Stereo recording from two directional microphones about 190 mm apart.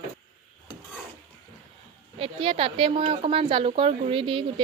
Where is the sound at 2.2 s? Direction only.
30° right (ahead or behind).